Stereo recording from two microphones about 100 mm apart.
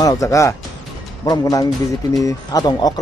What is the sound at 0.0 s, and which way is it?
Speech, 35° left (ahead or behind).